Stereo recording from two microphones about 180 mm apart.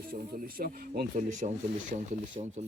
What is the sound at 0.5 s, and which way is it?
Speech, 55° right (ahead or behind).